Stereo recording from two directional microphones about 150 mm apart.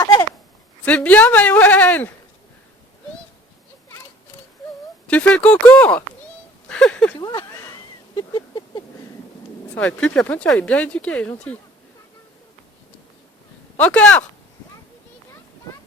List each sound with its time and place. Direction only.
0.9 s speech: 10° left (ahead or behind)
5.0 s speech: 10° left (ahead or behind)
6.7 s a sound: 5° left (ahead or behind)
8.1 s a sound: 30° left (ahead or behind)
9.7 s speech: 10° left (ahead or behind)
13.7 s speech: 10° left (ahead or behind)